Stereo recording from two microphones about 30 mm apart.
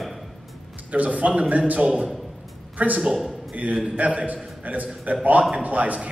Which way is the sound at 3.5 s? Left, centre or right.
Right.